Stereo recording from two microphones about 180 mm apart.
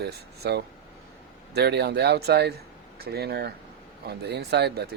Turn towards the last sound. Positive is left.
turn(degrees=-65)  # may be behind; listen again after turning